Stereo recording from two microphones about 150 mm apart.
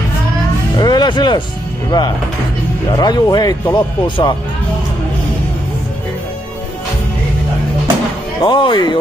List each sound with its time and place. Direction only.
0.7 s music: 30° left (ahead or behind)
1.9 s speech: 25° left (ahead or behind)
8.4 s speech: 30° left (ahead or behind)